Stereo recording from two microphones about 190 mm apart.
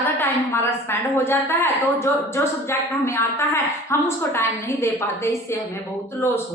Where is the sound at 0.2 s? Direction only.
10° left (ahead or behind).